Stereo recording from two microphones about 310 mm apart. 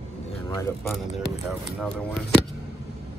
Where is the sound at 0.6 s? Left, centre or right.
Centre.